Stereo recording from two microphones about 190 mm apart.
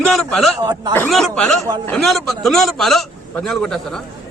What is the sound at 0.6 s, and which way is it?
Speech, 20° right (ahead or behind).